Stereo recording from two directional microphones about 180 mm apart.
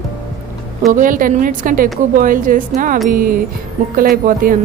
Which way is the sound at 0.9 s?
50° right (ahead or behind).